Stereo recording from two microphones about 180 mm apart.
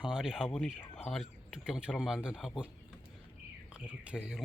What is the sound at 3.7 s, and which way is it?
Speech, 5° right (ahead or behind).